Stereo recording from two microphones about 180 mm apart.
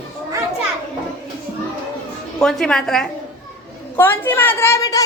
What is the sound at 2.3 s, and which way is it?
A woman's voice, 5° left (ahead or behind).